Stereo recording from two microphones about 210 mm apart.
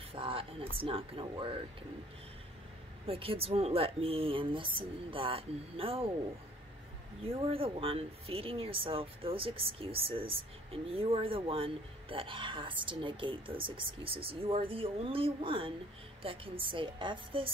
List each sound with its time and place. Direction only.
0.1 s speech: 25° right (ahead or behind)
3.1 s speech: 25° right (ahead or behind)
7.2 s speech: 25° right (ahead or behind)